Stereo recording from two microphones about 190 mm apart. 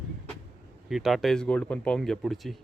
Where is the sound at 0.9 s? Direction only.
Centre (ahead or behind).